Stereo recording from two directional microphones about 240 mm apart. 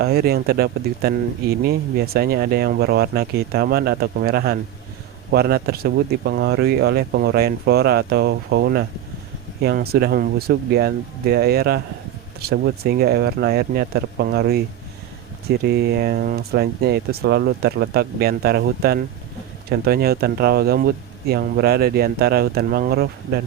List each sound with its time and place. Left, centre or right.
0.0 s speech: right